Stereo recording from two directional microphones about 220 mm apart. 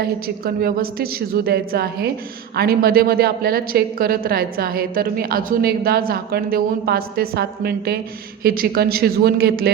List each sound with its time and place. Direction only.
0.0 s a woman's voice: 45° right (ahead or behind)